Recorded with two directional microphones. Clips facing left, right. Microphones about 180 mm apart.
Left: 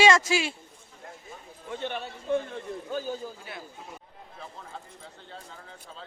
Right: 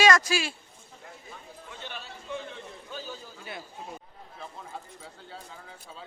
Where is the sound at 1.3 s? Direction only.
55° left (ahead or behind).